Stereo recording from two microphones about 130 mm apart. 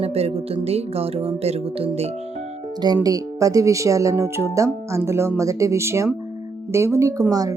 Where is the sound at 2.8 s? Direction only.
30° right (ahead or behind).